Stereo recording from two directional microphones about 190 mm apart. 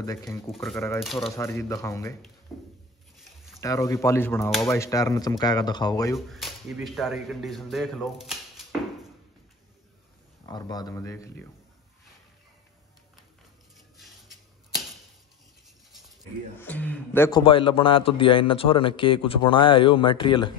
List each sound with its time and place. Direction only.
0.0 s speech: 15° left (ahead or behind)
0.5 s speech: centre (ahead or behind)
1.3 s speech: 15° left (ahead or behind)
2.5 s a sound: centre (ahead or behind)
3.6 s speech: 15° left (ahead or behind)
6.1 s speech: centre (ahead or behind)
10.5 s speech: 20° left (ahead or behind)
13.9 s a sound: centre (ahead or behind)
16.5 s speech: 10° left (ahead or behind)
17.3 s speech: 25° left (ahead or behind)